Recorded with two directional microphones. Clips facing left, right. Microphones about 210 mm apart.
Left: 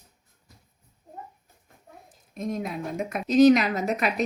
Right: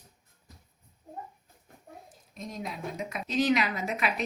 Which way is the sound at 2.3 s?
55° left (ahead or behind).